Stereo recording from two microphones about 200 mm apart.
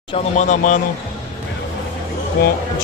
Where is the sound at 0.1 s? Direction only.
35° left (ahead or behind).